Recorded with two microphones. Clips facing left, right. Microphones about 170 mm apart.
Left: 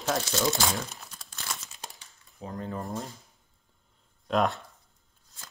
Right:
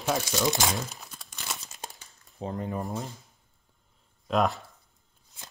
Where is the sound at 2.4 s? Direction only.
25° right (ahead or behind).